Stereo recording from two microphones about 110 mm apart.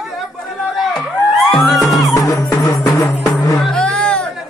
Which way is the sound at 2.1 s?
30° left (ahead or behind).